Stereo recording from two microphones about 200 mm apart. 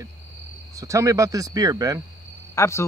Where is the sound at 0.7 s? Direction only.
15° right (ahead or behind).